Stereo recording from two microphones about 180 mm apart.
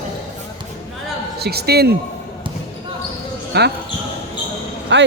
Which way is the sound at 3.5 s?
65° right (ahead or behind).